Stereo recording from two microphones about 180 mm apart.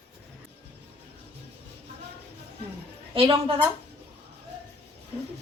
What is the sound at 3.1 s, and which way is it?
Speech, 30° right (ahead or behind).